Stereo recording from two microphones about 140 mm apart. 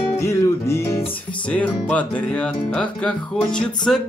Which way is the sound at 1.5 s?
10° left (ahead or behind).